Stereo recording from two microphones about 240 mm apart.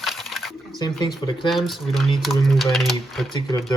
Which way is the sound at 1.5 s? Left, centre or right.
Centre.